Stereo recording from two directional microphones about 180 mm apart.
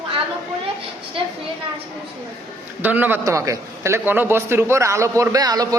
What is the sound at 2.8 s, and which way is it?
A man's voice, 10° right (ahead or behind).